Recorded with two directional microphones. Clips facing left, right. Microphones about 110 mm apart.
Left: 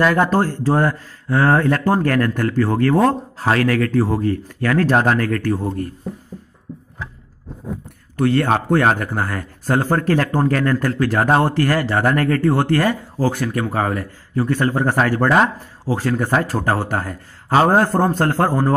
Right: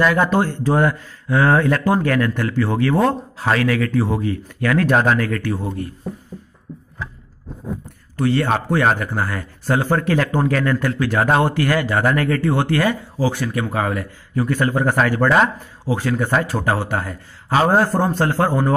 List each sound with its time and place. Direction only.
0.0 s speech: 40° left (ahead or behind)
5.1 s a man's voice: 45° left (ahead or behind)
6.7 s a sound: 40° left (ahead or behind)
8.2 s a man's voice: 55° left (ahead or behind)